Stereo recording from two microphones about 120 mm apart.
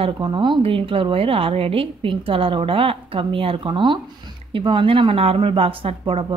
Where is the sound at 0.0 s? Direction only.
40° right (ahead or behind).